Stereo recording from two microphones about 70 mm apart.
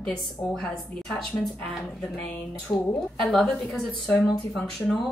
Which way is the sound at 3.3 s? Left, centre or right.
Centre.